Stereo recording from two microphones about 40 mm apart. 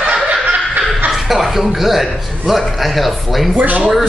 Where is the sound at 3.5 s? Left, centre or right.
Right.